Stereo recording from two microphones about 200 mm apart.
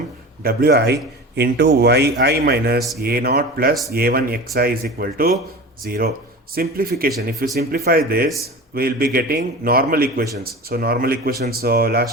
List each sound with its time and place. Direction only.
0.4 s speech: 50° right (ahead or behind)